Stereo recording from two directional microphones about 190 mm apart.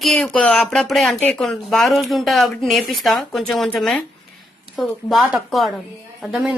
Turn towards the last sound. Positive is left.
turn(degrees=0)  # may be behind; listen again after turning